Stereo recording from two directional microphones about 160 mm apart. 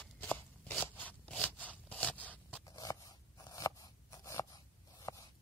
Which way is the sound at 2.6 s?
20° left (ahead or behind).